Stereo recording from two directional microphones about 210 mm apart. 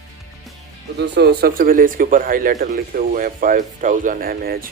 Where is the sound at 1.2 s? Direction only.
50° right (ahead or behind).